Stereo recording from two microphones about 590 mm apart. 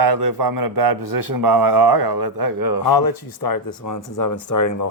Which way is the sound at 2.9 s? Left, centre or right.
Left.